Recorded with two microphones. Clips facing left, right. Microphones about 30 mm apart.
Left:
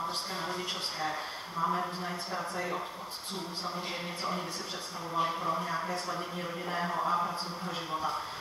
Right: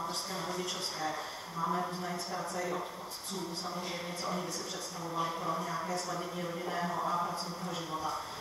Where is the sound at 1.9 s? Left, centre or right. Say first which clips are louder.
Left 1 dB; left.